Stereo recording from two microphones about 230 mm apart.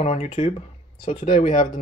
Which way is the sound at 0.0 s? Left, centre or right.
Left.